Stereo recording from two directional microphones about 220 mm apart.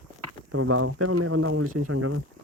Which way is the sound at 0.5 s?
85° right.